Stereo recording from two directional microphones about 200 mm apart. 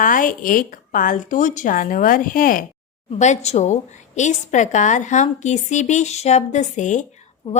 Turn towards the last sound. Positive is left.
turn(degrees=40)  # may be behind; listen again after turning